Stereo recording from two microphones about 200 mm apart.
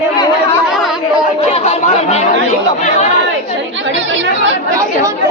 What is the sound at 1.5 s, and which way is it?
Speech, 35° left (ahead or behind).